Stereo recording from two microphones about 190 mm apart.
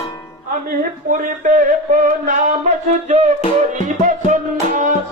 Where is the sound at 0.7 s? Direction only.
45° right (ahead or behind).